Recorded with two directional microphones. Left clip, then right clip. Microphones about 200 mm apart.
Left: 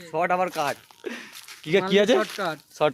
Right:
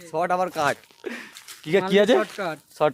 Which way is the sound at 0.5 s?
50° right (ahead or behind).